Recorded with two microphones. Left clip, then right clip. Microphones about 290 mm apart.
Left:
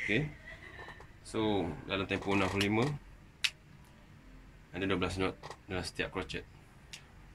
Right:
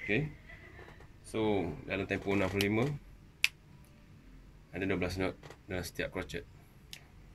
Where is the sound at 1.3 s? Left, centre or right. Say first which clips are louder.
Even; centre.